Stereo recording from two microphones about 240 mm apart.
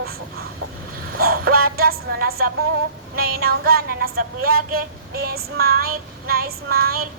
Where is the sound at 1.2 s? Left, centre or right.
Right.